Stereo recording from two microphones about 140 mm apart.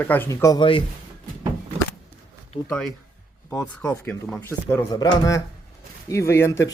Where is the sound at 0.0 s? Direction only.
15° left (ahead or behind).